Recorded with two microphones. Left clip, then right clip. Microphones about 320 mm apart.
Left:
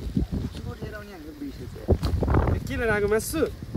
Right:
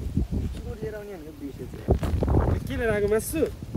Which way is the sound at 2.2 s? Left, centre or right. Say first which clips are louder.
Left 1 dB; centre.